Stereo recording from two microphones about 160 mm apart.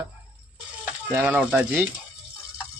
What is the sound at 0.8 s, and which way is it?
Stir, 15° right (ahead or behind).